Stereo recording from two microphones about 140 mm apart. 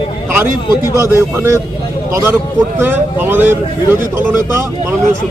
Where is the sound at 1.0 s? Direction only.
15° right (ahead or behind).